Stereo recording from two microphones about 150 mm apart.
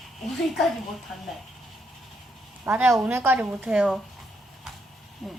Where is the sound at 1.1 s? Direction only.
Centre (ahead or behind).